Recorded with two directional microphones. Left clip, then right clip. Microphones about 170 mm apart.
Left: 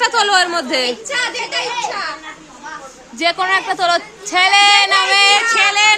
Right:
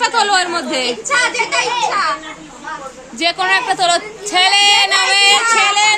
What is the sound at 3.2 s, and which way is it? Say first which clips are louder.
Speech: right 1 dB; 35° left (ahead or behind).